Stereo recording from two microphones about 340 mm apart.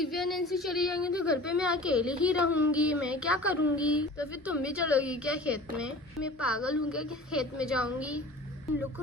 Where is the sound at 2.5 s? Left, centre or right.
Left.